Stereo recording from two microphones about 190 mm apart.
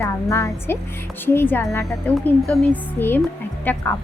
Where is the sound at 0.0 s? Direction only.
15° left (ahead or behind).